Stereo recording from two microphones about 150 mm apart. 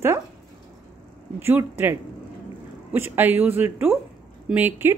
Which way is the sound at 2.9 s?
15° right (ahead or behind).